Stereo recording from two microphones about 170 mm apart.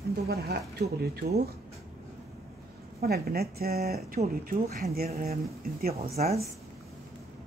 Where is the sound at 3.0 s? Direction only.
65° right (ahead or behind).